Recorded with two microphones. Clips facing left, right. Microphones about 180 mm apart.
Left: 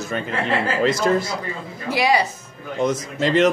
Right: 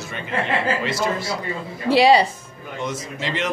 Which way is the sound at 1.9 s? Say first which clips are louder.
Right 5 dB; 30° right (ahead or behind).